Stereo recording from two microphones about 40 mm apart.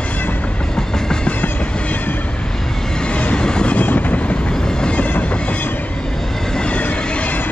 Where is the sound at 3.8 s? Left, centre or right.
Left.